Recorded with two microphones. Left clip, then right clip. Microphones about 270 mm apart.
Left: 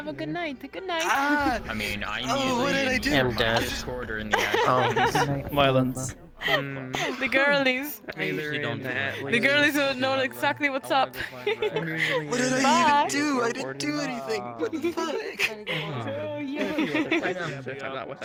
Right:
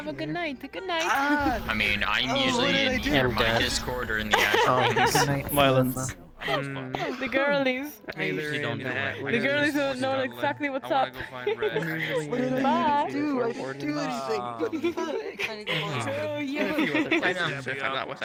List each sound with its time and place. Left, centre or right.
0.3 s speech: centre
1.0 s speech: centre
1.7 s speech: right
2.2 s speech: centre
4.3 s speech: centre
7.0 s speech: left
8.2 s speech: centre
9.3 s a man's voice: centre
12.3 s music: left
12.6 s a man's voice: left
13.1 s music: left
13.9 s speech: centre
16.7 s speech: centre